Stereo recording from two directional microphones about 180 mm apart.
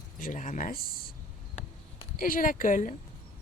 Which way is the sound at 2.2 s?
50° left (ahead or behind).